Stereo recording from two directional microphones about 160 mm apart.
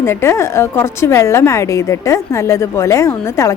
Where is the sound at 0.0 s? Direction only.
15° left (ahead or behind).